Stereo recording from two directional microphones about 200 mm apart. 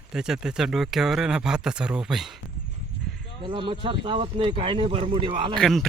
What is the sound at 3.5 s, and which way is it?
Speech, 25° right (ahead or behind).